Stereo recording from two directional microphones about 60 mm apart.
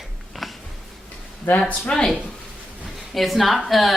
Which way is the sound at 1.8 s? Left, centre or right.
Centre.